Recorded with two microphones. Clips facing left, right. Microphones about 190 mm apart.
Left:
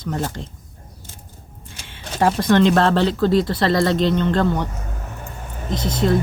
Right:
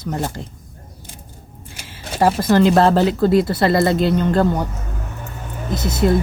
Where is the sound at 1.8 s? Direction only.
5° right (ahead or behind).